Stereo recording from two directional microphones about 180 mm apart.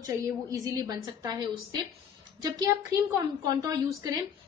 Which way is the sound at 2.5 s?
20° right (ahead or behind).